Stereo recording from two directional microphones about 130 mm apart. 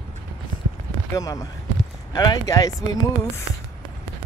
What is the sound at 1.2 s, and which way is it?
Speech, 25° left (ahead or behind).